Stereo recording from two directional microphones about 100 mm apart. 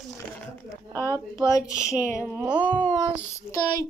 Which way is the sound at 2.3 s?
15° right (ahead or behind).